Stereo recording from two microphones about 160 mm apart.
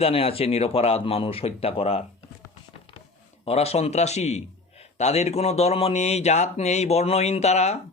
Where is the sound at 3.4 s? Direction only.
40° left (ahead or behind).